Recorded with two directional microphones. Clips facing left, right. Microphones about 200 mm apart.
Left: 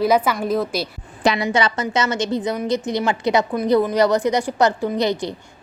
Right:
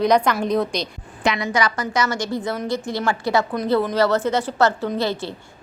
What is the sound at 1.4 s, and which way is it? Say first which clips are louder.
A woman's voice: left 2 dB; 25° left (ahead or behind).